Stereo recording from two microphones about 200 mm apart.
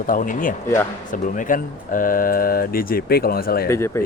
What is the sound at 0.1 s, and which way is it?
Speech, 40° left (ahead or behind).